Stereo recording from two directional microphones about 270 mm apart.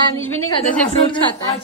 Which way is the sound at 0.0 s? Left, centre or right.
Centre.